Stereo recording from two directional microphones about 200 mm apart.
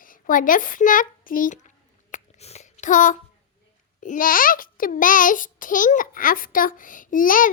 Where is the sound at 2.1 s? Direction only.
35° left (ahead or behind).